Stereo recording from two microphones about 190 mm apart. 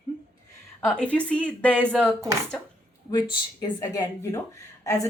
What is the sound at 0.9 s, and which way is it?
Speech, 5° left (ahead or behind).